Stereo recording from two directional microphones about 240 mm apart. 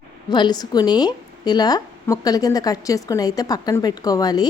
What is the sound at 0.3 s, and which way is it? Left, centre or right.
Speech, centre.